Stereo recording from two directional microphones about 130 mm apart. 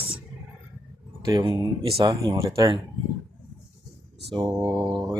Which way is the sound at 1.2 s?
35° right (ahead or behind).